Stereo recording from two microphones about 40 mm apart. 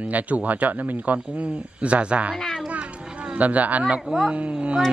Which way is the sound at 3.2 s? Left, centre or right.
Right.